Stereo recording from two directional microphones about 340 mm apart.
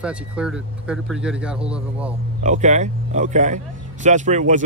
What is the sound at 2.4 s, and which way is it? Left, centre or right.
A man's voice, right.